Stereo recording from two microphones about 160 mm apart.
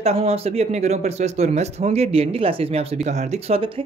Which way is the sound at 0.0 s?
40° right (ahead or behind).